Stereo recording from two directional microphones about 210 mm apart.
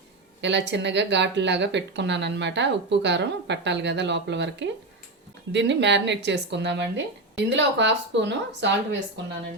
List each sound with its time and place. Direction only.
0.4 s speech: 55° right (ahead or behind)